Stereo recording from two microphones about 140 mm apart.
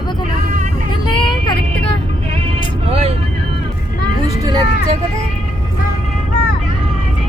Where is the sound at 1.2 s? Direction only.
35° left (ahead or behind).